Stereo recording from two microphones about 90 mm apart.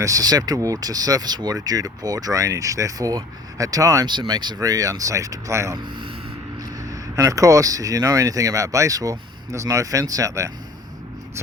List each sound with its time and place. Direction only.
0.0 s speech: 40° right (ahead or behind)
4.0 s speech: 55° right (ahead or behind); by 5.7 s 35° right (ahead or behind)
5.7 s speech: 60° right (ahead or behind)
6.6 s speech: 40° right (ahead or behind)